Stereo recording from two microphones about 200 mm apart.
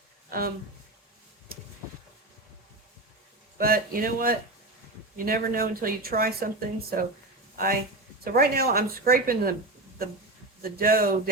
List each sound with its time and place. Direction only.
0.3 s speech: 50° right (ahead or behind)
3.6 s speech: 45° right (ahead or behind)
10.6 s speech: 45° right (ahead or behind)